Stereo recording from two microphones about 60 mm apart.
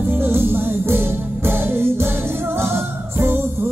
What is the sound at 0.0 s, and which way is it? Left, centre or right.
Music, right.